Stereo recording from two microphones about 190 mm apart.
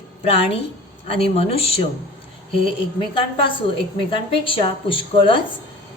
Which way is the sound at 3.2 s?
25° left (ahead or behind).